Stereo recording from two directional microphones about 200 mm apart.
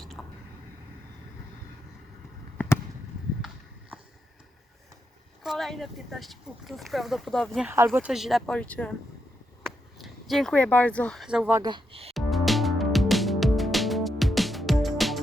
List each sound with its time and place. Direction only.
0.0 s a sound: centre (ahead or behind)
5.4 s speech: centre (ahead or behind)
11.6 s speech: 25° right (ahead or behind)
12.1 s music: centre (ahead or behind)